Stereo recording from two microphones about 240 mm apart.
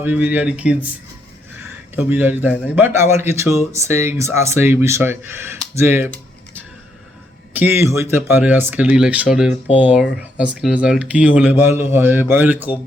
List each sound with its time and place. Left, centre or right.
0.0 s speech: centre
2.0 s speech: centre
7.5 s speech: centre